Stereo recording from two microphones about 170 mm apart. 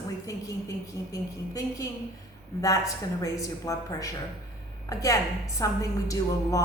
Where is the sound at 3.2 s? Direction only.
20° left (ahead or behind).